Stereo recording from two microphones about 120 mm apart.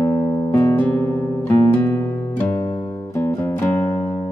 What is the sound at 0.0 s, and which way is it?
Music, 30° left (ahead or behind).